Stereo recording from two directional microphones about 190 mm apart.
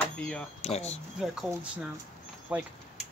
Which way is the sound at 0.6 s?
35° left (ahead or behind).